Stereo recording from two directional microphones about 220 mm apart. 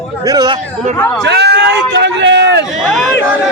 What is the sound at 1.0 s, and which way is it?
Speech, 5° left (ahead or behind).